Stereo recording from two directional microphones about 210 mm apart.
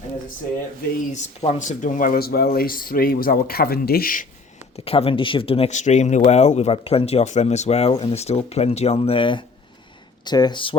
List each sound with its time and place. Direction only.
1.1 s speech: 35° left (ahead or behind)
4.9 s speech: 25° left (ahead or behind)